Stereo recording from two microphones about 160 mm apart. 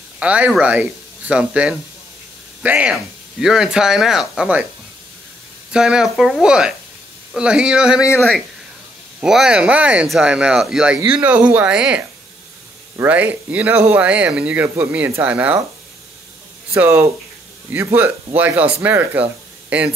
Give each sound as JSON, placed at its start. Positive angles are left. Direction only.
{"t": 0.2, "sound": "speech", "side_deg": -10}
{"t": 5.7, "sound": "speech", "side_deg": -5}
{"t": 8.0, "sound": "speech", "side_deg": 15}
{"t": 9.2, "sound": "speech", "side_deg": -5}
{"t": 16.7, "sound": "speech", "side_deg": -15}